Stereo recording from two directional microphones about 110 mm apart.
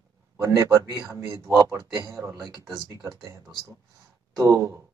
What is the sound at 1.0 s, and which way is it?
A man's voice, 30° right (ahead or behind).